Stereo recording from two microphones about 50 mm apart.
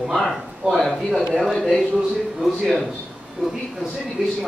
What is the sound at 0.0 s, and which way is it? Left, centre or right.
A man's voice, centre.